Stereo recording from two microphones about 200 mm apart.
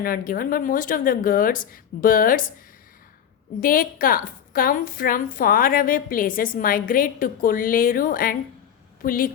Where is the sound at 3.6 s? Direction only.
45° left (ahead or behind).